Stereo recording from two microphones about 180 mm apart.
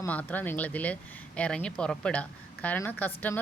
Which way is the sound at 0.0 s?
10° left (ahead or behind).